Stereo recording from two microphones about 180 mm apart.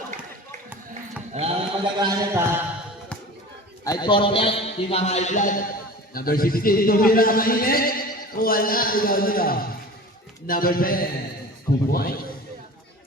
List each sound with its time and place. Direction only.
1.3 s mantra: 35° right (ahead or behind); by 2.6 s 15° right (ahead or behind)
3.8 s a man's voice: 25° left (ahead or behind); by 12.2 s 55° left (ahead or behind)